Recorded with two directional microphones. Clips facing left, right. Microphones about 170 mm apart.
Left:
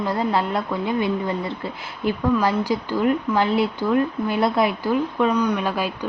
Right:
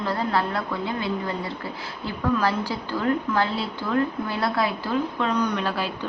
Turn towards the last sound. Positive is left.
turn(degrees=10)  # may be behind; listen again after turning